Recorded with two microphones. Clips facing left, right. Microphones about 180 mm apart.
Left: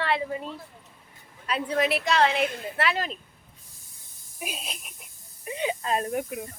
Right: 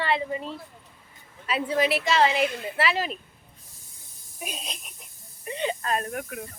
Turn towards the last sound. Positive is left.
turn(degrees=20)  # may be behind; listen again after turning